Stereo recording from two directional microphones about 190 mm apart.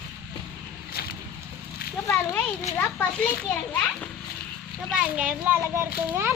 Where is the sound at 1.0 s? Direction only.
55° left (ahead or behind).